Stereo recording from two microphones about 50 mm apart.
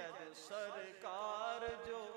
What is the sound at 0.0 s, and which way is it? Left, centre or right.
Music, right.